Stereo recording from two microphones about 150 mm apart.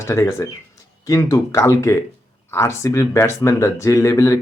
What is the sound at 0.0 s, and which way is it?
Speech, 20° left (ahead or behind).